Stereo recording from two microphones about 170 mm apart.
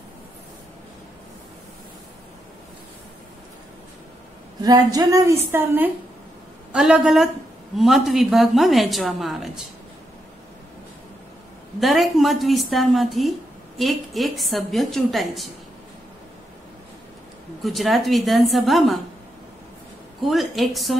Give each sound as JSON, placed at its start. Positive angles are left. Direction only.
{"t": 4.6, "sound": "a woman's voice", "side_deg": -20}
{"t": 11.8, "sound": "a woman's voice", "side_deg": 0}
{"t": 17.6, "sound": "a woman's voice", "side_deg": 0}
{"t": 20.2, "sound": "a woman's voice", "side_deg": 0}